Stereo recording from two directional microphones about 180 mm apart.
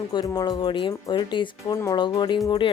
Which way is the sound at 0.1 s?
20° left (ahead or behind).